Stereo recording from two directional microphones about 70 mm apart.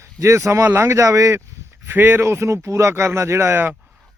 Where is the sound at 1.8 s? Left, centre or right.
Right.